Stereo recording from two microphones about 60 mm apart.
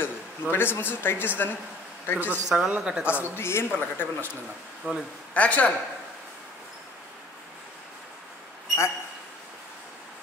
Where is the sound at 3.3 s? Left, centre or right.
Left.